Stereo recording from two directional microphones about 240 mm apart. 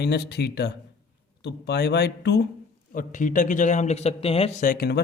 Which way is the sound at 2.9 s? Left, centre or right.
Left.